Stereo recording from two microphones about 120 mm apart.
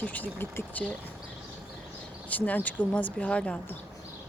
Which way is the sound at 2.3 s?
15° left (ahead or behind).